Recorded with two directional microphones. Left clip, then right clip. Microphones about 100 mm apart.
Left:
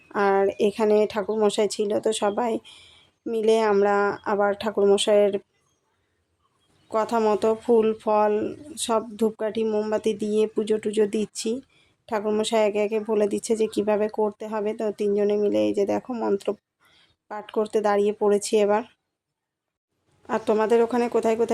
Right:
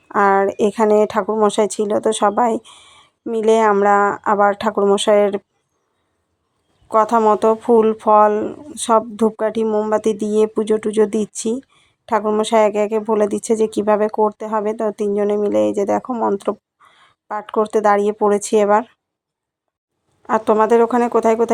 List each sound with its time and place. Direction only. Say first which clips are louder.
0.1 s a woman's voice: right 7 dB; 35° right (ahead or behind)
6.9 s a woman's voice: right 9 dB; 40° right (ahead or behind)
16.1 s speech: right 6 dB; 25° right (ahead or behind)
20.2 s a woman's voice: right 8 dB; 35° right (ahead or behind)